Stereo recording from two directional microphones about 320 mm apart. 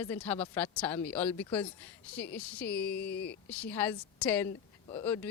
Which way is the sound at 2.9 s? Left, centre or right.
Left.